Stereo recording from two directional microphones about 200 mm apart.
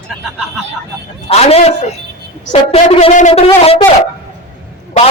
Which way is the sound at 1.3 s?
30° left (ahead or behind).